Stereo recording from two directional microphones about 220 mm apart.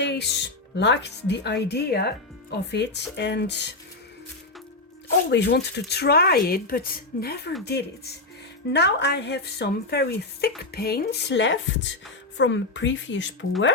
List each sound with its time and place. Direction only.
0.0 s speech: 50° left (ahead or behind)
5.3 s speech: 50° left (ahead or behind)